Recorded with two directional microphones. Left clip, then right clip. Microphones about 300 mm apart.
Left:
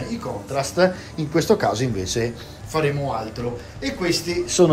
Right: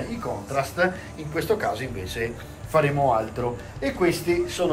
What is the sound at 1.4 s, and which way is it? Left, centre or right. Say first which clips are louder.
Speech: left 5 dB; centre.